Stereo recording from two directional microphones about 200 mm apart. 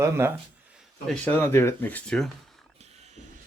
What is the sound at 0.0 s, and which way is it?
Speech, 10° right (ahead or behind).